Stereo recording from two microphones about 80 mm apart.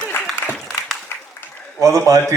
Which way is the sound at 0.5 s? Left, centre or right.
Centre.